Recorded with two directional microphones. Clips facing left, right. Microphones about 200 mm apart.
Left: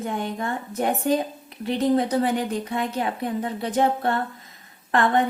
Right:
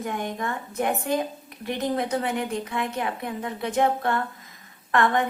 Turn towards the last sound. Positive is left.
turn(degrees=30)  # may be behind; listen again after turning